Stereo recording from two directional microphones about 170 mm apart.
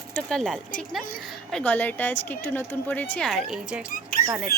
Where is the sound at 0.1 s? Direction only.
5° left (ahead or behind).